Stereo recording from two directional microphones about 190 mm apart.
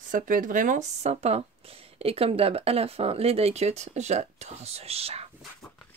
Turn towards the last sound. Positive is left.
turn(degrees=-30)  # may be behind; listen again after turning